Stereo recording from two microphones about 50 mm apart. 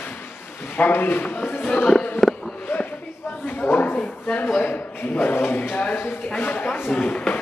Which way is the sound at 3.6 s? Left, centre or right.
Left.